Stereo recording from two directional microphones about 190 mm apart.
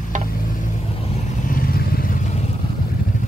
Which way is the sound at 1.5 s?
50° left (ahead or behind).